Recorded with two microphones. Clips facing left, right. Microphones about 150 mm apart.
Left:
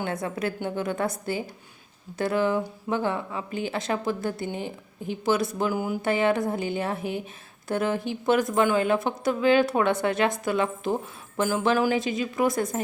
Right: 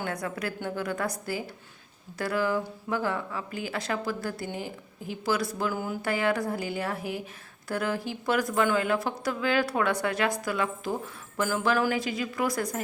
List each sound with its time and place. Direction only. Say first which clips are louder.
0.0 s speech: left 4 dB; 25° left (ahead or behind)